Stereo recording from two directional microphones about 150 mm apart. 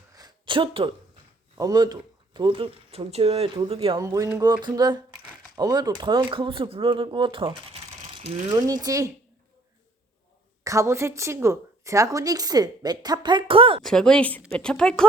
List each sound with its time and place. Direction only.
0.1 s a sound: 25° right (ahead or behind)
1.5 s speech: 25° right (ahead or behind)
3.9 s a woman's voice: 25° right (ahead or behind); by 8.4 s 45° right (ahead or behind)
8.4 s a woman's voice: 25° right (ahead or behind)
10.6 s a woman's voice: 20° right (ahead or behind); by 13.8 s 35° right (ahead or behind)
13.8 s speech: 5° left (ahead or behind)